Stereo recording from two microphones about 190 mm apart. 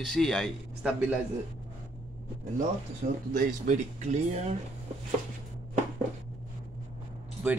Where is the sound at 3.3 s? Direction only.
40° right (ahead or behind).